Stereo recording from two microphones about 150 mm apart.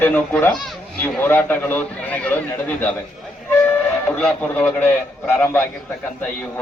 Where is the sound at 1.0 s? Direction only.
15° left (ahead or behind).